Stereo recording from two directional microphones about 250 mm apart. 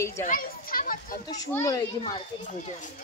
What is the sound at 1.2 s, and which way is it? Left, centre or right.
Speech, centre.